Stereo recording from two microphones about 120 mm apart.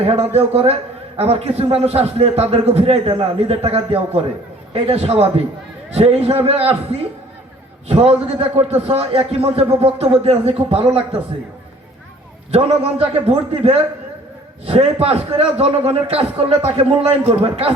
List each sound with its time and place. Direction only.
0.0 s a man's voice: 55° right (ahead or behind)
12.5 s a man's voice: 55° right (ahead or behind)
15.0 s a man's voice: 55° right (ahead or behind)